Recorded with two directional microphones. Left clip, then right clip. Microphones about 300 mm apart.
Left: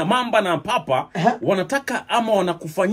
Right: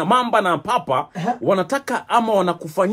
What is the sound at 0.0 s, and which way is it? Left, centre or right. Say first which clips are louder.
A man's voice: right 2 dB; centre.